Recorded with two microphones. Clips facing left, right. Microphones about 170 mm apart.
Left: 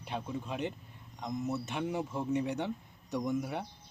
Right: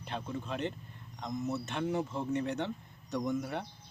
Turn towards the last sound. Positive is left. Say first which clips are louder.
# even
turn(degrees=10)  # may be behind; listen again after turning